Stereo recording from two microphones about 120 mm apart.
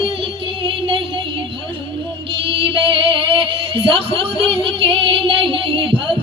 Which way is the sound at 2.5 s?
50° right (ahead or behind).